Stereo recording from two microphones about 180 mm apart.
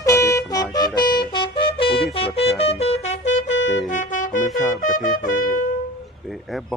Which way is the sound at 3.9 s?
45° left (ahead or behind).